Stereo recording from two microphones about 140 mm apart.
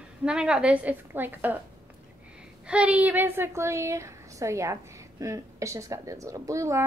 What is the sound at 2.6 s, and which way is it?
A woman's voice, 10° right (ahead or behind).